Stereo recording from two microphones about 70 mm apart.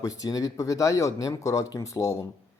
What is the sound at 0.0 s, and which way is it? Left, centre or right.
A man's voice, left.